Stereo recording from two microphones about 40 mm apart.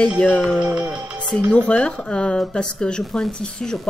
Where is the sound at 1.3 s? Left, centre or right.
Left.